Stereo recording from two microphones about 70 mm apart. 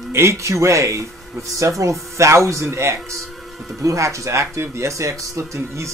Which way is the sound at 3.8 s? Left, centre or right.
Right.